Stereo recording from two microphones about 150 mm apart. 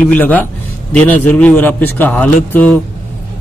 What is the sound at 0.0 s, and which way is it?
Speech, 10° left (ahead or behind).